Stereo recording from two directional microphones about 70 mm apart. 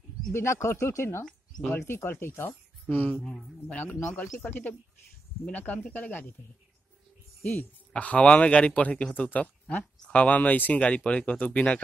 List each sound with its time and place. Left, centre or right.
0.3 s speech: left
2.9 s speech: left
7.9 s speech: centre